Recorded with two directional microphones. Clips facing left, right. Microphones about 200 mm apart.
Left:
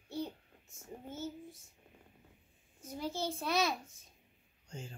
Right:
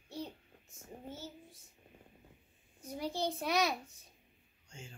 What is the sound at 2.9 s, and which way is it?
Speech, 15° right (ahead or behind).